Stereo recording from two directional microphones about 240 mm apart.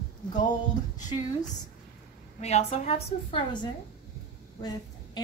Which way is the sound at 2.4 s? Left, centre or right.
Left.